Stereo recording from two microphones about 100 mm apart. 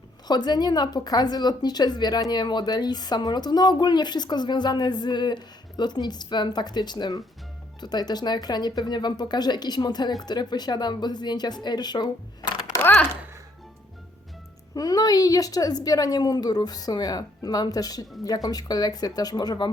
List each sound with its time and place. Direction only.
0.3 s speech: 45° left (ahead or behind)
12.8 s speech: 15° left (ahead or behind)
14.8 s a woman's voice: 40° left (ahead or behind)